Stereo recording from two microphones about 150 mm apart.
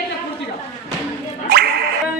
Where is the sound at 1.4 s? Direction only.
90° right.